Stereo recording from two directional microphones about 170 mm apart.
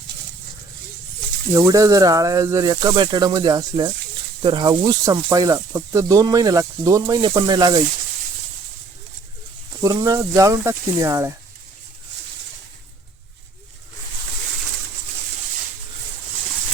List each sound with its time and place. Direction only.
1.5 s speech: 20° right (ahead or behind)
9.8 s speech: 20° right (ahead or behind)